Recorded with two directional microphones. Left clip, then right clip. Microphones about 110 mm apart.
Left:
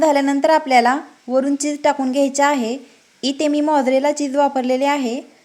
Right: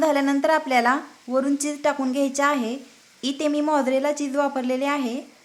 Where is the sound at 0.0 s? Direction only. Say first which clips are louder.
Left 5 dB; 30° left (ahead or behind).